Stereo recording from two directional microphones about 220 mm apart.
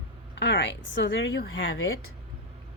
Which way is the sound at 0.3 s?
55° left (ahead or behind).